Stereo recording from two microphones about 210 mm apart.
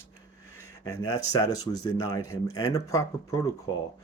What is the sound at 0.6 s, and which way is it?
Speech, 15° left (ahead or behind).